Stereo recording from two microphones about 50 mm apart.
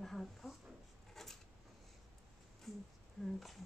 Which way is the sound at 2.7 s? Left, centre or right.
Centre.